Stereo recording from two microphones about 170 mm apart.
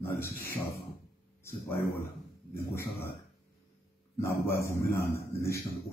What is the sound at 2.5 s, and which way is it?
Speech, 15° left (ahead or behind).